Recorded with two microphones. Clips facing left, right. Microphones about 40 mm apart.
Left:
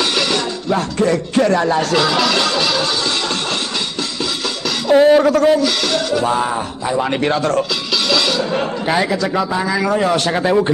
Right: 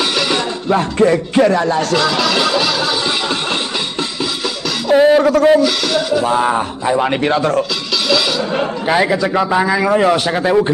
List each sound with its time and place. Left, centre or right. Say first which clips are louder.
0.0 s music: right 1 dB; centre
0.3 s music: right 2 dB; centre
1.5 s a sound: even; centre
4.8 s music: even; centre
5.6 s speech: right 2 dB; centre
6.4 s speech: right 4 dB; right
7.2 s a man's voice: right 2 dB; centre